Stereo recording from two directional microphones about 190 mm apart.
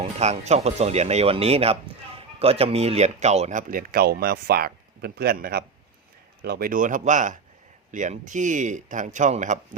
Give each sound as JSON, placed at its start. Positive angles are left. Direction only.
{"t": 0.0, "sound": "speech", "side_deg": -35}